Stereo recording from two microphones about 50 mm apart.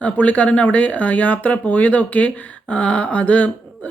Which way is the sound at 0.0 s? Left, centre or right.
Left.